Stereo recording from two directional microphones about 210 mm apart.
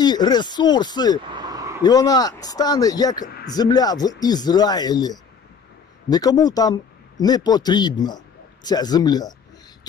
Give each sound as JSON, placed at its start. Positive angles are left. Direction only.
{"t": 0.0, "sound": "speech", "side_deg": 20}
{"t": 1.3, "sound": "a sound", "side_deg": -20}
{"t": 1.8, "sound": "speech", "side_deg": 20}